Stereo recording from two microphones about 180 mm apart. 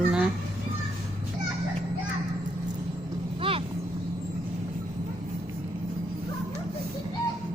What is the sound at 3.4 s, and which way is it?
Vehicle, 30° right (ahead or behind).